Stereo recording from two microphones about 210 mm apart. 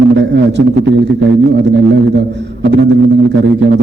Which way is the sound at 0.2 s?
55° right (ahead or behind).